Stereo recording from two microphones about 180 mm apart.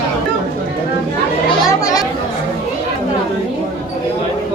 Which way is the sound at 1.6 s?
20° left (ahead or behind).